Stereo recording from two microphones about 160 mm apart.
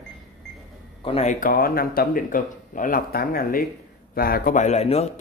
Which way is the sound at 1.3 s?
60° left (ahead or behind).